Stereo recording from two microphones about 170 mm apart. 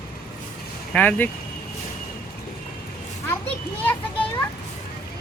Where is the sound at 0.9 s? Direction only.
10° left (ahead or behind).